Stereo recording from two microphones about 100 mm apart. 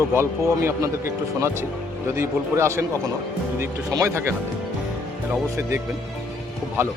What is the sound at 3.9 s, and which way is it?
Speech, 30° right (ahead or behind).